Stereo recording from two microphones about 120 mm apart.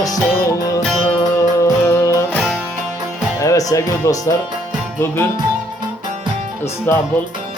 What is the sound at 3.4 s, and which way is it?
Speech, 25° left (ahead or behind).